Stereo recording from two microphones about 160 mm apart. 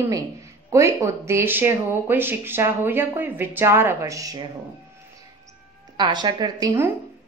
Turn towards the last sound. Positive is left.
turn(degrees=-20)  # may be behind; listen again after turning